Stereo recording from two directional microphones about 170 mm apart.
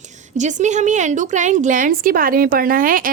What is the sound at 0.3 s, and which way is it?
A woman's voice, 45° right (ahead or behind).